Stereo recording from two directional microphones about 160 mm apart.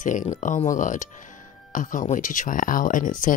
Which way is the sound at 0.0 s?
50° left (ahead or behind).